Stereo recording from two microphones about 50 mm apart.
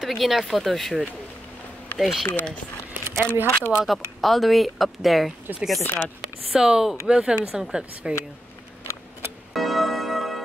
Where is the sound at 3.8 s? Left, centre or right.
Centre.